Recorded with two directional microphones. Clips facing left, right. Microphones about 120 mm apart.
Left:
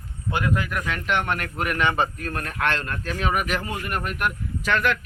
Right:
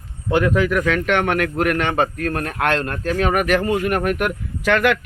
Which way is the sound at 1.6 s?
60° right (ahead or behind).